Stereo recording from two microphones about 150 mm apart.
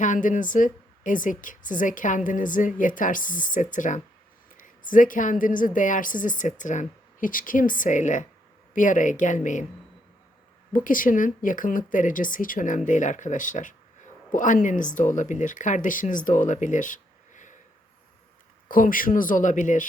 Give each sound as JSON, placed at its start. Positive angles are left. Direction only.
{"t": 0.0, "sound": "a woman's voice", "side_deg": 60}
{"t": 10.7, "sound": "a woman's voice", "side_deg": 65}
{"t": 18.7, "sound": "a woman's voice", "side_deg": 65}